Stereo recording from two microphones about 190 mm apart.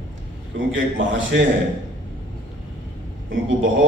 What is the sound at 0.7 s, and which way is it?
Speech, 85° right.